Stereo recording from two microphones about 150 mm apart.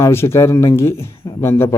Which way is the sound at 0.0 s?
15° left (ahead or behind).